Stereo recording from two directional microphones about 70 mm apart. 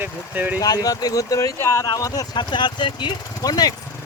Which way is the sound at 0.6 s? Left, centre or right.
Left.